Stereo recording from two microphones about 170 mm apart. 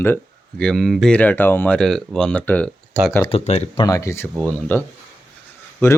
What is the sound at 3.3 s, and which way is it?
Speech, 35° left (ahead or behind).